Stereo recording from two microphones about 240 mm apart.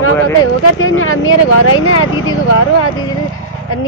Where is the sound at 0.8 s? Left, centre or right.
Left.